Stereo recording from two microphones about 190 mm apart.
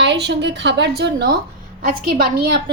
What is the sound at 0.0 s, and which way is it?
A woman's voice, 65° right (ahead or behind).